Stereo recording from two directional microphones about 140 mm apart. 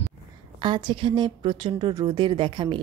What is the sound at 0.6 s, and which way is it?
A woman's voice, 35° right (ahead or behind).